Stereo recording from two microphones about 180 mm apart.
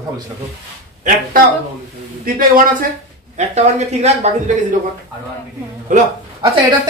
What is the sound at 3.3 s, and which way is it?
Speech, 40° right (ahead or behind).